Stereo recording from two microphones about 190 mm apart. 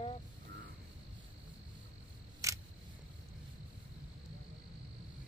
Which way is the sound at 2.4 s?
15° right (ahead or behind).